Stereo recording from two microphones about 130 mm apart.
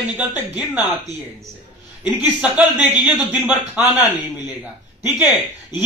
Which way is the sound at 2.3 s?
10° right (ahead or behind).